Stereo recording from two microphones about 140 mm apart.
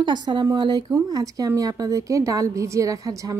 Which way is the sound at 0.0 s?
30° right (ahead or behind).